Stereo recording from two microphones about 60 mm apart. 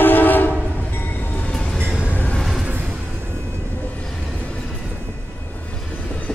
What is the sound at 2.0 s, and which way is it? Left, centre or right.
Train, left.